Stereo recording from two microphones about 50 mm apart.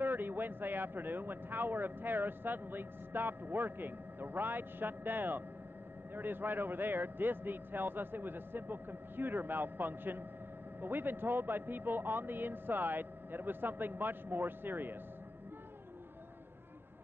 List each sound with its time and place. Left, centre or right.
0.0 s a man's voice: right